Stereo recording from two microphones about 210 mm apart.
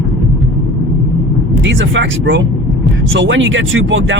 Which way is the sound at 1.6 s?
60° right (ahead or behind).